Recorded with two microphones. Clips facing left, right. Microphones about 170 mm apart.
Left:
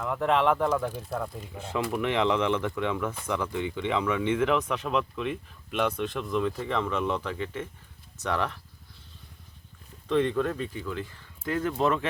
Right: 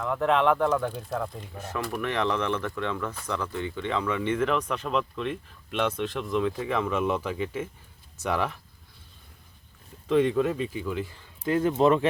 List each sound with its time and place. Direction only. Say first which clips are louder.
0.0 s speech: right 1 dB; centre (ahead or behind)
2.0 s speech: left 2 dB; 15° left (ahead or behind); by 8.5 s 10° right (ahead or behind)
10.1 s speech: right 3 dB; 10° right (ahead or behind)